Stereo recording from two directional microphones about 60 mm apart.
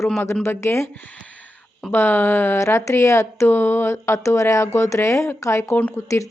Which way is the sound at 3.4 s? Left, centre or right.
Left.